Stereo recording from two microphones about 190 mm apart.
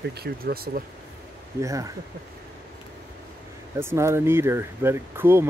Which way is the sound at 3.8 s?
15° right (ahead or behind).